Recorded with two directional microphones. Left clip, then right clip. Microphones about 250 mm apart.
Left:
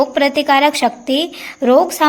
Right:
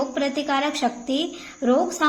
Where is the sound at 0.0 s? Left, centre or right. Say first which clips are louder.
Left 10 dB; left.